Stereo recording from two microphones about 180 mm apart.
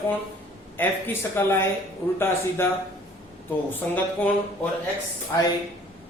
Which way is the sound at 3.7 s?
10° left (ahead or behind).